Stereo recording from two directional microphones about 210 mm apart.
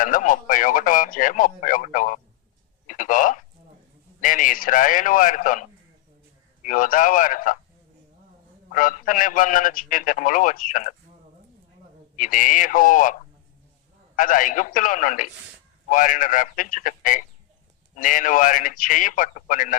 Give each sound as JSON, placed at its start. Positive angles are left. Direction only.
{"t": 0.0, "sound": "speech", "side_deg": 40}
{"t": 2.8, "sound": "a sound", "side_deg": 40}
{"t": 4.2, "sound": "a man's voice", "side_deg": 40}
{"t": 8.7, "sound": "a man's voice", "side_deg": 40}
{"t": 12.1, "sound": "a man's voice", "side_deg": 40}
{"t": 14.2, "sound": "a man's voice", "side_deg": 40}